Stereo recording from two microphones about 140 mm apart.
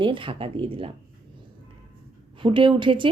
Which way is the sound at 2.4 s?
35° right (ahead or behind).